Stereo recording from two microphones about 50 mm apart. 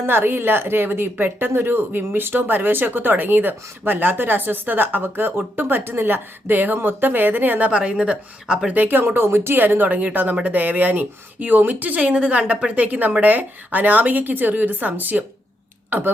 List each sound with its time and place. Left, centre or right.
0.0 s a woman's voice: right
7.7 s a woman's voice: right
8.8 s a woman's voice: right